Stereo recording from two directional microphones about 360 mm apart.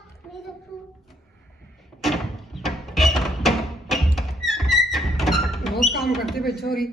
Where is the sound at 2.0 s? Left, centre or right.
Centre.